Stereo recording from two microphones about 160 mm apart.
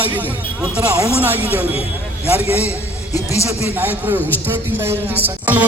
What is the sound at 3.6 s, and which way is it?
A man's voice, 10° right (ahead or behind).